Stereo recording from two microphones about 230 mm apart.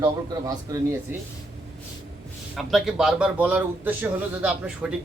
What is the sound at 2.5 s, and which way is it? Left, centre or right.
A man's voice, centre.